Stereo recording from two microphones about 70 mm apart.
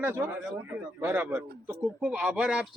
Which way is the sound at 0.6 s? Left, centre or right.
Right.